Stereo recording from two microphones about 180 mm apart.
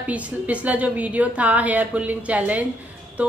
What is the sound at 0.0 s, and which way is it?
A woman's voice, 10° right (ahead or behind).